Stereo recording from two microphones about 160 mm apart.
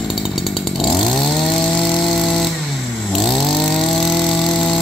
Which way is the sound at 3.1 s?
Centre (ahead or behind).